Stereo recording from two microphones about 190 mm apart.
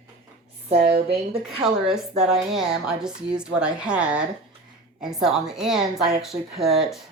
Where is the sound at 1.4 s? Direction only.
5° right (ahead or behind).